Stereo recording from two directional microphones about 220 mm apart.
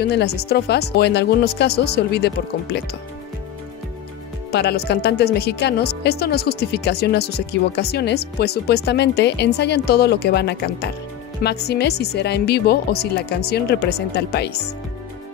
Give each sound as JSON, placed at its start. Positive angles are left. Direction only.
{"t": 0.0, "sound": "speech", "side_deg": 50}
{"t": 4.5, "sound": "speech", "side_deg": 45}